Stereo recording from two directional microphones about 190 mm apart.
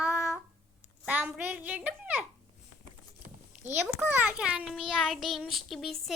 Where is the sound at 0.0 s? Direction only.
5° right (ahead or behind).